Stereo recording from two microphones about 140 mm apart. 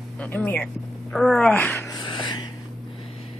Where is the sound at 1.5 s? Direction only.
15° left (ahead or behind).